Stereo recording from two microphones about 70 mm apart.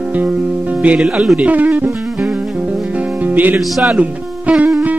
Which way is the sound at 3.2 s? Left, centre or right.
Right.